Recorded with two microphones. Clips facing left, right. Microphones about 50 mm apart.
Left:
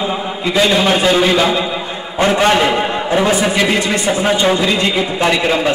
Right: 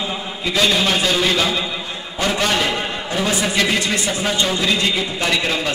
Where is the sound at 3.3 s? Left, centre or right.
Centre.